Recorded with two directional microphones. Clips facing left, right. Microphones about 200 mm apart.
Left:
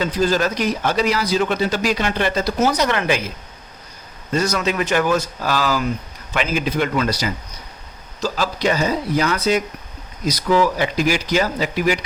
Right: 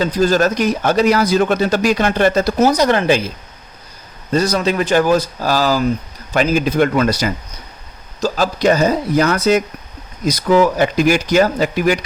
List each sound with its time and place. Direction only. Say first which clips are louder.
0.0 s speech: right 4 dB; 40° right (ahead or behind)